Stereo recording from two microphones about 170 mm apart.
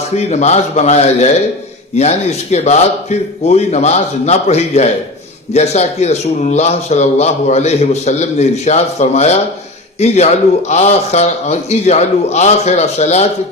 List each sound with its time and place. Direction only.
0.2 s a man's voice: 40° left (ahead or behind)